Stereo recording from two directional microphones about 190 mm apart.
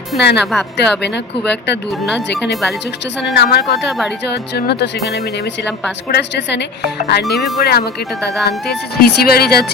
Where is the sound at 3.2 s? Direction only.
65° left (ahead or behind).